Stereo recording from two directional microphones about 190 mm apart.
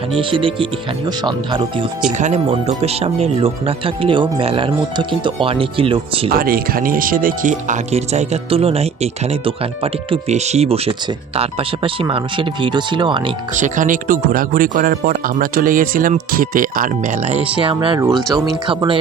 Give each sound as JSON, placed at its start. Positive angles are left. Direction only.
{"t": 0.2, "sound": "speech", "side_deg": -25}
{"t": 2.1, "sound": "speech", "side_deg": -35}
{"t": 6.3, "sound": "speech", "side_deg": -50}
{"t": 13.6, "sound": "speech", "side_deg": -45}
{"t": 18.1, "sound": "speech", "side_deg": 0}
{"t": 18.4, "sound": "speech", "side_deg": -25}